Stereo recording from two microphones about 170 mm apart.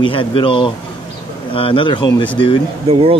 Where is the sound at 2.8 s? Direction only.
35° right (ahead or behind).